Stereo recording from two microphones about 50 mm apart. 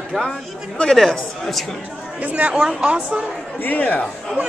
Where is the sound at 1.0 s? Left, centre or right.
Centre.